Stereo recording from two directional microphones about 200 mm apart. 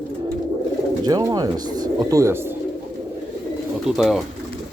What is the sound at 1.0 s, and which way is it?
Speech, 20° right (ahead or behind).